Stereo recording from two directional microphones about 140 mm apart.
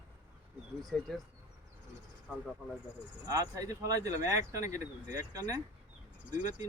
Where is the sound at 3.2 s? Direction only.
25° right (ahead or behind).